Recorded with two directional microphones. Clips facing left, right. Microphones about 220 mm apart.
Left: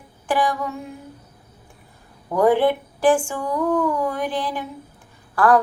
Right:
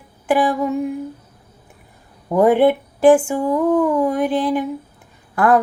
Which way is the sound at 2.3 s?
20° right (ahead or behind).